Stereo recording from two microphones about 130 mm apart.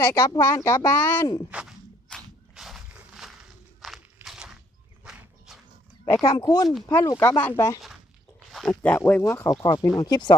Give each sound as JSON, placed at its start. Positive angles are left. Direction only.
{"t": 0.0, "sound": "speech", "side_deg": 20}
{"t": 1.5, "sound": "speech", "side_deg": -10}
{"t": 2.0, "sound": "walk", "side_deg": 0}
{"t": 6.3, "sound": "speech", "side_deg": 30}
{"t": 8.4, "sound": "a sound", "side_deg": 0}
{"t": 8.8, "sound": "speech", "side_deg": 15}